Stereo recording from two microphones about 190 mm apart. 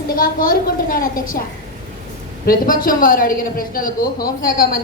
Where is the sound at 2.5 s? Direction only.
50° left (ahead or behind).